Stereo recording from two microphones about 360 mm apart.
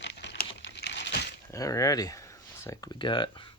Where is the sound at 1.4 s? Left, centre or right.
Centre.